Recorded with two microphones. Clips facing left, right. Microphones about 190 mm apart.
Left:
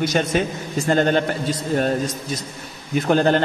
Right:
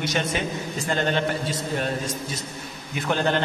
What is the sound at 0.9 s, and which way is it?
Speech, 45° left (ahead or behind).